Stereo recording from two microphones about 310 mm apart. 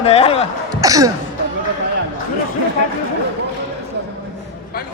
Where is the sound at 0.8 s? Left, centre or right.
Centre.